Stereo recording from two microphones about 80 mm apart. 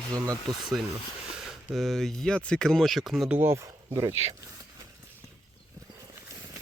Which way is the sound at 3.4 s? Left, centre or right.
Right.